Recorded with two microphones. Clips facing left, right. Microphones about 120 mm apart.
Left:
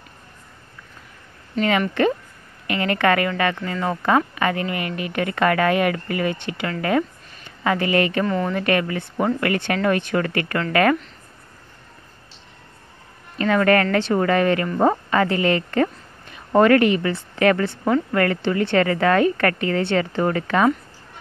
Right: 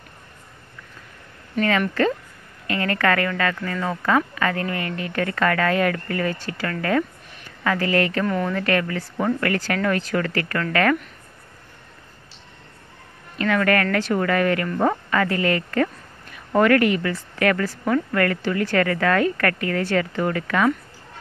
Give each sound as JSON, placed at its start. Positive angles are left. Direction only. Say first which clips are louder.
{"t": 1.6, "sound": "a woman's voice", "louder": "left 1 dB", "side_deg": 20}
{"t": 8.3, "sound": "speech", "louder": "left 1 dB", "side_deg": 0}
{"t": 8.5, "sound": "speech", "louder": "left 1 dB", "side_deg": 20}
{"t": 13.4, "sound": "speech", "louder": "left 3 dB", "side_deg": 30}